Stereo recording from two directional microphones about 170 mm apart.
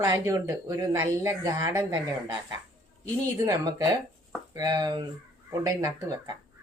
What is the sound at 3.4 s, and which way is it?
Speech, 20° right (ahead or behind).